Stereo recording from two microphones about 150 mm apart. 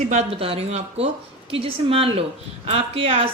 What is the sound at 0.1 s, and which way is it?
A woman's voice, 45° right (ahead or behind).